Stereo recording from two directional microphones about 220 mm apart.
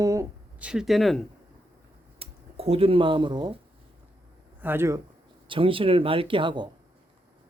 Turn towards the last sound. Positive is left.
turn(degrees=-20)  # may be behind; listen again after turning